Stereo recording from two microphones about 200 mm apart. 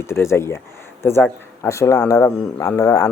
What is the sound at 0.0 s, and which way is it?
A man's voice, 15° left (ahead or behind).